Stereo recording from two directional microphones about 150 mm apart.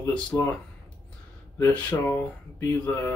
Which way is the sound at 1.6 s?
10° left (ahead or behind).